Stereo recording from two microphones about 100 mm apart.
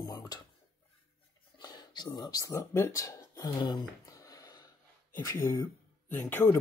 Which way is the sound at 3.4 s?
45° left (ahead or behind).